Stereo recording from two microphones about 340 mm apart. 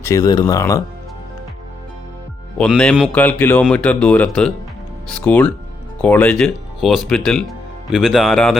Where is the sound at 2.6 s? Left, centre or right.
Centre.